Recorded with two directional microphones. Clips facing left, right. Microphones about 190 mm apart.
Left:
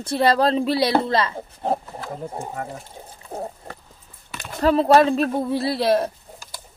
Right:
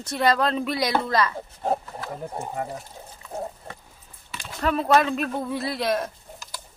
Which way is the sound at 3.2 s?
30° left (ahead or behind).